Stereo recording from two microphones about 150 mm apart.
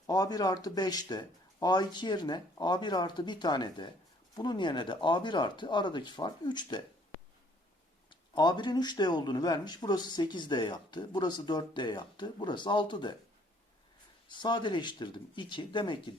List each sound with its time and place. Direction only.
0.1 s speech: 25° left (ahead or behind)
8.1 s speech: 30° left (ahead or behind)
14.3 s speech: 30° left (ahead or behind)